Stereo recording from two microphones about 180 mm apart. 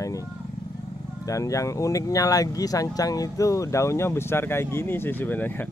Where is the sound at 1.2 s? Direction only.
20° left (ahead or behind).